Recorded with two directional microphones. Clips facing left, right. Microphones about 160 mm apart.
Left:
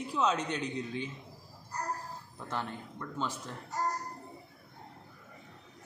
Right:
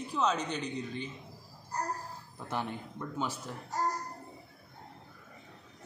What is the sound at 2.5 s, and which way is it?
Speech, 15° right (ahead or behind).